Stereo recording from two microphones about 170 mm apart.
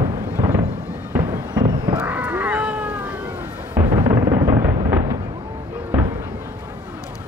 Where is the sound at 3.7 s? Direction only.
20° right (ahead or behind).